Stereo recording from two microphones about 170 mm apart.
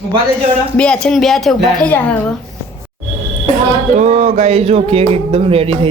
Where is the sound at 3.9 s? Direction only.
40° right (ahead or behind).